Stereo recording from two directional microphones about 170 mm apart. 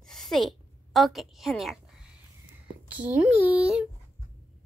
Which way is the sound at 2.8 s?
10° right (ahead or behind).